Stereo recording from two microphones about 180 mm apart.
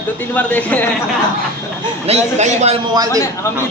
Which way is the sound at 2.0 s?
40° right (ahead or behind).